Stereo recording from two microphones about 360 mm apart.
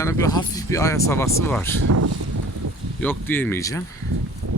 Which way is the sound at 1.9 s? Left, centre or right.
Right.